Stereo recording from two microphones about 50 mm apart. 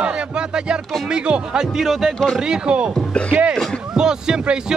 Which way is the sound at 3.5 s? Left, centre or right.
Centre.